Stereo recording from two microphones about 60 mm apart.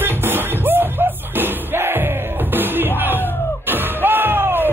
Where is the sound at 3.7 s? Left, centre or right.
Right.